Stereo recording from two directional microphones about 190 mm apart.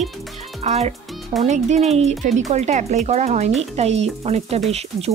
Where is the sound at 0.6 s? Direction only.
35° right (ahead or behind).